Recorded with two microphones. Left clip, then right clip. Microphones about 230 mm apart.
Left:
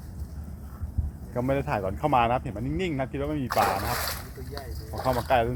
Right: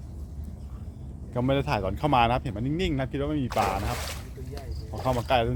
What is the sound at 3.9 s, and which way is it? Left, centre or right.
Speech, centre.